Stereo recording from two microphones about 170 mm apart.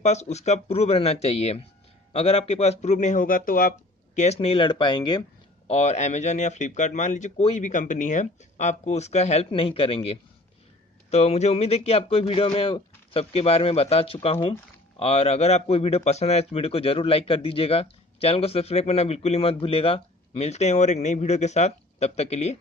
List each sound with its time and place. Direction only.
0.0 s speech: 40° left (ahead or behind); by 5.2 s 25° left (ahead or behind)
5.7 s speech: 40° left (ahead or behind)